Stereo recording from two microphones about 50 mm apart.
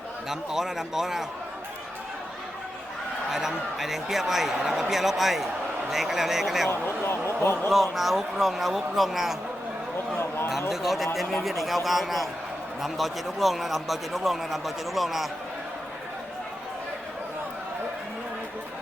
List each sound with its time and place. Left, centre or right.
0.3 s speech: centre
3.2 s a man's voice: centre
6.7 s speech: left
7.7 s a man's voice: centre
10.2 s speech: left
10.7 s a man's voice: centre